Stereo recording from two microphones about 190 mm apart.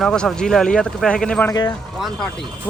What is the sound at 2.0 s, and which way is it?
Speech, centre (ahead or behind).